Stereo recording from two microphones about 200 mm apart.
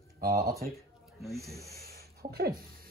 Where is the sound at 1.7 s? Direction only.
15° left (ahead or behind).